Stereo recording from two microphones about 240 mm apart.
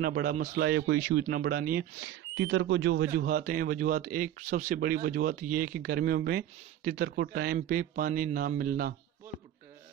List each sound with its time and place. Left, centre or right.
0.0 s speech: right